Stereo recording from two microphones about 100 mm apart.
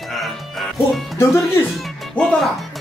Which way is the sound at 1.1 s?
25° left (ahead or behind).